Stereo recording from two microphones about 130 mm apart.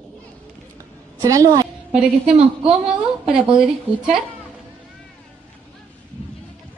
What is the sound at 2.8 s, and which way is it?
Speech, 5° right (ahead or behind).